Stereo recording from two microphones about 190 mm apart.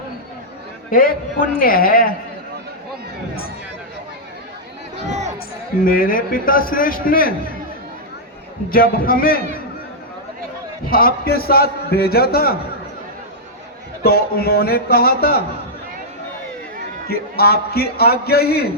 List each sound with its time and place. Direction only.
0.9 s a man's voice: 50° left (ahead or behind)
4.9 s music: 35° right (ahead or behind)
5.8 s a man's voice: 50° left (ahead or behind)
8.7 s a man's voice: 50° left (ahead or behind)
10.8 s a man's voice: 50° left (ahead or behind)
14.0 s a man's voice: 55° left (ahead or behind)
17.1 s a man's voice: 55° left (ahead or behind)